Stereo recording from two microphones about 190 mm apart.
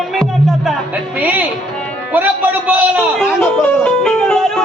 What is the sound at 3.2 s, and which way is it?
Speech, 5° left (ahead or behind).